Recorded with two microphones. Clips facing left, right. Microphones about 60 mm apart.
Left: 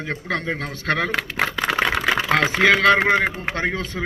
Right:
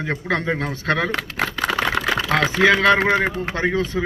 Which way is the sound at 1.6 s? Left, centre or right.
Left.